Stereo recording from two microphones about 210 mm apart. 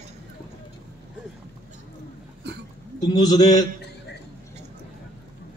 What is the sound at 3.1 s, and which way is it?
Speech, 20° left (ahead or behind).